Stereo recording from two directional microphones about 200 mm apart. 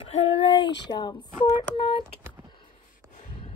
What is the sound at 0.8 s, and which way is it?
Speech, 20° left (ahead or behind).